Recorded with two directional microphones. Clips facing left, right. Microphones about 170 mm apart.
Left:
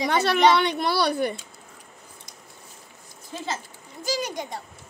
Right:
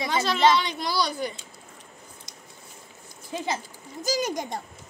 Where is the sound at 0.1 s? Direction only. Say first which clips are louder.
Left 2 dB; 65° left (ahead or behind).